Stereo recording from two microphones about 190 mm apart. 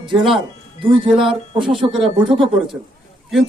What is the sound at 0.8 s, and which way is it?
Speech, 30° right (ahead or behind).